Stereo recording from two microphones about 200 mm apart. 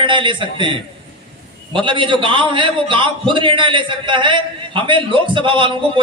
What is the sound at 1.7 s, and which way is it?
A man's voice, 25° right (ahead or behind).